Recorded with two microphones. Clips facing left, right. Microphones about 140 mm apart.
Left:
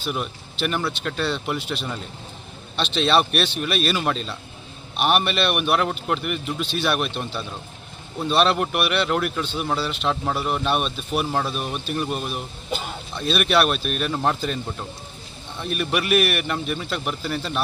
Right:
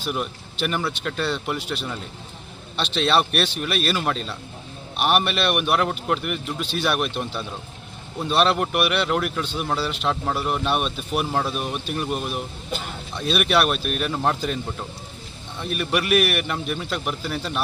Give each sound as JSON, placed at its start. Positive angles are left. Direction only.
{"t": 0.0, "sound": "speech", "side_deg": 0}